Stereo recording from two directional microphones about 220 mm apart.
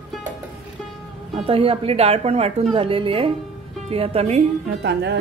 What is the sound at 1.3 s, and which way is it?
Speech, 25° right (ahead or behind).